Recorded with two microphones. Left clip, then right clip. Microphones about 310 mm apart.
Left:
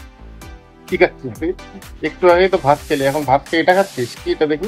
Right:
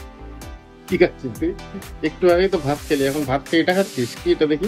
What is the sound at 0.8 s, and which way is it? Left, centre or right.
Speech, centre.